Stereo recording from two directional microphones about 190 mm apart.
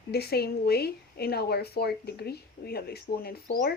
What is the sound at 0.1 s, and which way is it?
Speech, 55° left (ahead or behind).